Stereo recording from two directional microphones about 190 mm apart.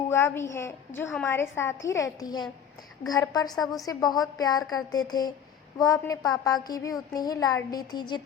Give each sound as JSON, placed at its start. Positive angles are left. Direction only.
{"t": 0.1, "sound": "a woman's voice", "side_deg": 15}